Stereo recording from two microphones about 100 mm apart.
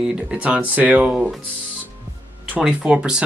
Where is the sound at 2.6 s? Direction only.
10° right (ahead or behind).